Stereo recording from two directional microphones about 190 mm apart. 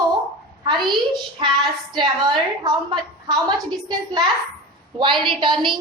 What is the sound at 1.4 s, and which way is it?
A woman's voice, 25° right (ahead or behind).